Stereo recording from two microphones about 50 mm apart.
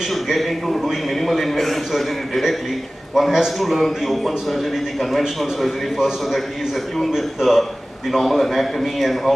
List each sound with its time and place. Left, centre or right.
0.1 s a man's voice: centre
7.1 s a man's voice: centre